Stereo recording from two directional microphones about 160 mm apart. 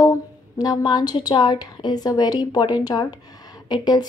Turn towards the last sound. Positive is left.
turn(degrees=25)  # may be behind; listen again after turning